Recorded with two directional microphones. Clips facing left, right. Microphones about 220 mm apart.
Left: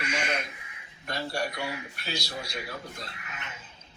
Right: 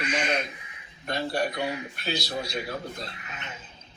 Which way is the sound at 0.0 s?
20° right (ahead or behind).